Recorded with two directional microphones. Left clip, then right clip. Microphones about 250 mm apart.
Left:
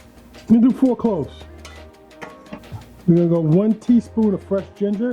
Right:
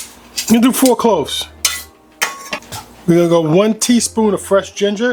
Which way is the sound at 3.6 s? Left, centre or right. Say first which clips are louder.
Right 6 dB; centre.